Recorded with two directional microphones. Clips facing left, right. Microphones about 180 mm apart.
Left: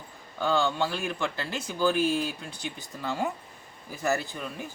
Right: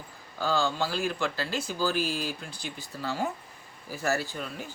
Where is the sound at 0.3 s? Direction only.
20° left (ahead or behind).